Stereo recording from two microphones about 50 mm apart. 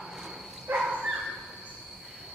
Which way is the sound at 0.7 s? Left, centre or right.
Right.